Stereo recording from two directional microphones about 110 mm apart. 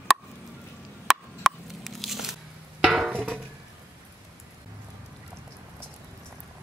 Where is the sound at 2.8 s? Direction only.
5° right (ahead or behind).